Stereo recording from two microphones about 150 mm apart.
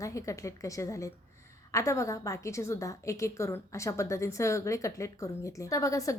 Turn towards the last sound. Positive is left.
turn(degrees=20)  # may be behind; listen again after turning